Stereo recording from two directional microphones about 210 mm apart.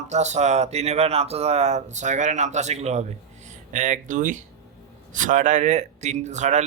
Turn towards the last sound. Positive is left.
turn(degrees=-35)  # may be behind; listen again after turning